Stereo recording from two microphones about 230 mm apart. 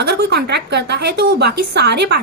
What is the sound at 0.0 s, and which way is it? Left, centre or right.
A woman's voice, right.